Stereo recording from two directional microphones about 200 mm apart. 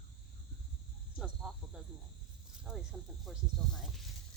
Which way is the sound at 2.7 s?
5° right (ahead or behind).